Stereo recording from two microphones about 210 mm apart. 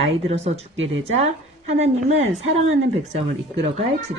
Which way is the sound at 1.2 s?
30° right (ahead or behind).